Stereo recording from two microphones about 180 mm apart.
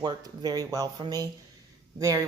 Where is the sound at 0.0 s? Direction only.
20° right (ahead or behind).